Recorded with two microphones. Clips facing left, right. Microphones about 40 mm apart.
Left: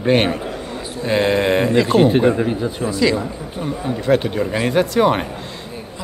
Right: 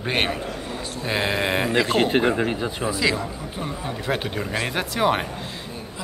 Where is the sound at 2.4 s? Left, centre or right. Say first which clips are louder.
Left 4 dB; right.